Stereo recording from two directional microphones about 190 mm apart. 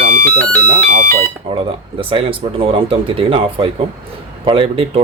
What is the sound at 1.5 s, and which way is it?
Speech, 30° right (ahead or behind).